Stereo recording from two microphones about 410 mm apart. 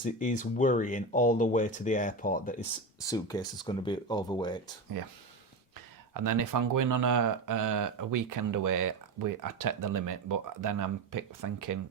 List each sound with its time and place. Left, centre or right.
0.0 s speech: centre
3.0 s speech: centre
6.1 s speech: right